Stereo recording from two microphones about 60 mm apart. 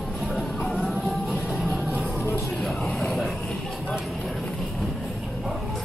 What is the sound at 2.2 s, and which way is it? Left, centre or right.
Music, left.